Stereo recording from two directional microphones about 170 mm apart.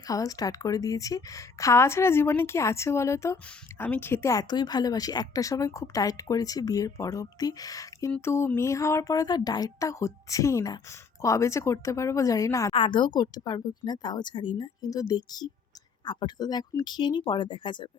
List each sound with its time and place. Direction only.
0.1 s speech: 20° left (ahead or behind)